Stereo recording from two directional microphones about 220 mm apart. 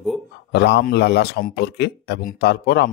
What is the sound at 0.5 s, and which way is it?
A man's voice, 50° left (ahead or behind).